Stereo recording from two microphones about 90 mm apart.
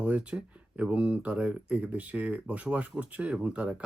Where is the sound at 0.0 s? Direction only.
15° right (ahead or behind).